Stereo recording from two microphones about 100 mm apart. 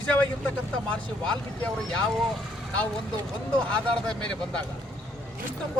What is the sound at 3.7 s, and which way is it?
Speech, 10° left (ahead or behind).